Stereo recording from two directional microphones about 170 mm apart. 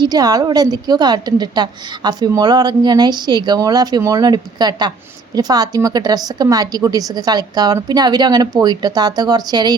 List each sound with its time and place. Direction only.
0.0 s a woman's voice: 20° right (ahead or behind)